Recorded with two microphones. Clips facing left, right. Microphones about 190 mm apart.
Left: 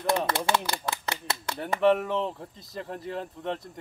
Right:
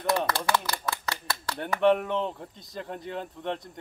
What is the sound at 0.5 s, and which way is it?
Typewriter, 25° left (ahead or behind).